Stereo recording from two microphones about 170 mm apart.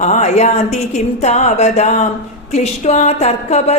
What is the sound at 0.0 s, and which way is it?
Speech, 40° left (ahead or behind).